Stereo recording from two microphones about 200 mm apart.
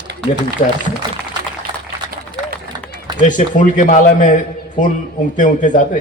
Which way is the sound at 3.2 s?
40° left (ahead or behind).